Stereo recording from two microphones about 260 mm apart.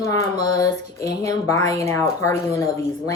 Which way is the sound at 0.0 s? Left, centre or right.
Centre.